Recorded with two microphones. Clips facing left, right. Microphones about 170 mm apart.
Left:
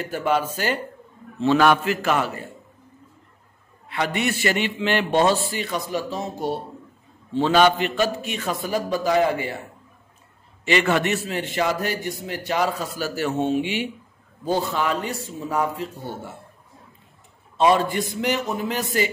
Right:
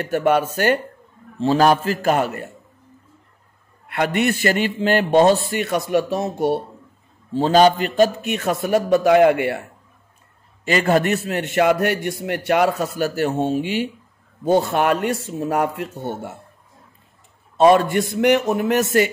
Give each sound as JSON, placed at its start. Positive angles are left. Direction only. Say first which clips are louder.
{"t": 0.2, "sound": "a man's voice", "louder": "right 4 dB", "side_deg": -60}
{"t": 1.4, "sound": "a man's voice", "louder": "right 2 dB", "side_deg": -35}
{"t": 3.9, "sound": "a man's voice", "louder": "right 5 dB", "side_deg": -50}
{"t": 5.5, "sound": "a man's voice", "louder": "right 7 dB", "side_deg": -60}
{"t": 7.3, "sound": "a man's voice", "louder": "right 3 dB", "side_deg": -40}
{"t": 10.6, "sound": "a man's voice", "louder": "right 3 dB", "side_deg": -45}
{"t": 11.2, "sound": "a man's voice", "louder": "right 6 dB", "side_deg": -60}
{"t": 13.4, "sound": "a man's voice", "louder": "right 2 dB", "side_deg": -45}
{"t": 14.5, "sound": "a man's voice", "louder": "right 6 dB", "side_deg": -60}
{"t": 17.6, "sound": "a man's voice", "louder": "right 5 dB", "side_deg": -50}